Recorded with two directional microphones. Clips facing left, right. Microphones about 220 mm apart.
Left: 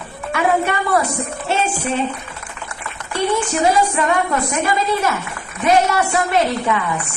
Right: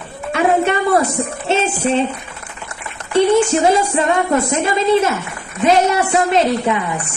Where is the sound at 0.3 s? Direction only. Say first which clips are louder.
Right 3 dB; 25° right (ahead or behind).